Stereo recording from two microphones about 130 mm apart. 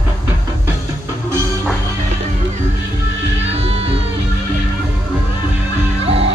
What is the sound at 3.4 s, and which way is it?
Music, 55° right (ahead or behind).